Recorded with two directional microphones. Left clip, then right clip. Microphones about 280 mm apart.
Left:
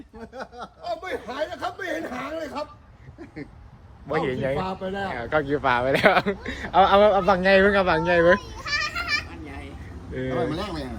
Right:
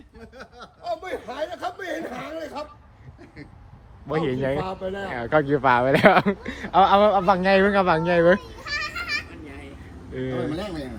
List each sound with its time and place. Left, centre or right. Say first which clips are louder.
0.2 s a sound: left 5 dB; centre
0.9 s a sound: right 1 dB; left
4.1 s speech: even; right
4.6 s speech: even; left
5.0 s speech: right 3 dB; right
8.4 s children playing: left 2 dB; centre
10.2 s speech: left 1 dB; centre
10.5 s a man's voice: even; centre